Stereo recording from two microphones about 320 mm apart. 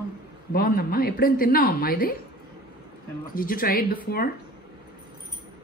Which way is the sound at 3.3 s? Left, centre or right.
Left.